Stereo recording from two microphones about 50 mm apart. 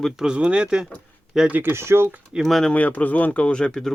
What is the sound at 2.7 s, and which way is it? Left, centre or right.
Speech, left.